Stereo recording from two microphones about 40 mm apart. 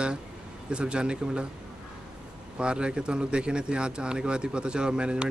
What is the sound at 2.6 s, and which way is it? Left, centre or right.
Speech, right.